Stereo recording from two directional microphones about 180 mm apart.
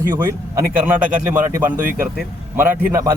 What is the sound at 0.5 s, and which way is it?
Speech, 10° right (ahead or behind).